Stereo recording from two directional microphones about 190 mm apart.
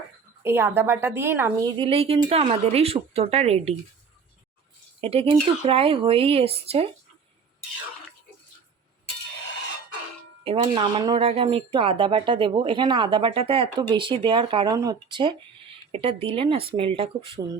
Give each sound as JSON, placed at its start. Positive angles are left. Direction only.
{"t": 0.4, "sound": "a woman's voice", "side_deg": -10}
{"t": 1.8, "sound": "speech", "side_deg": -30}
{"t": 4.9, "sound": "speech", "side_deg": -30}
{"t": 10.4, "sound": "speech", "side_deg": -30}